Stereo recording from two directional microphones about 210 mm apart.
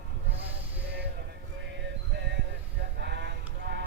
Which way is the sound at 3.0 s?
55° right (ahead or behind).